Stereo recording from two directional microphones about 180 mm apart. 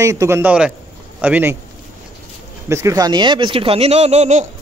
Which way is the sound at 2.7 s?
15° right (ahead or behind).